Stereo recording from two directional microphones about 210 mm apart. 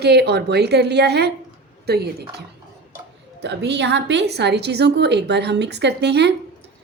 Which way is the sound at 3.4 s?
55° right (ahead or behind).